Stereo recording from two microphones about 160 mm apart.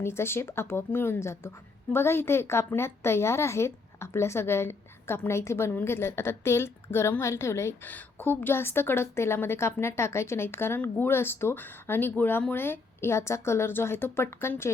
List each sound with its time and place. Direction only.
0.0 s a woman's voice: 15° left (ahead or behind)